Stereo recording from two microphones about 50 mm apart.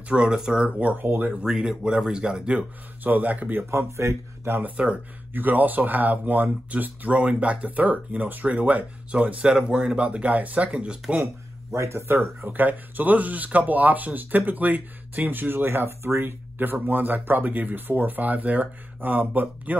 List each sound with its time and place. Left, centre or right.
0.1 s speech: centre
0.7 s speech: right
1.3 s speech: centre
3.0 s speech: right
3.7 s speech: right
4.7 s speech: right
5.3 s speech: right
11.7 s speech: right
12.4 s speech: right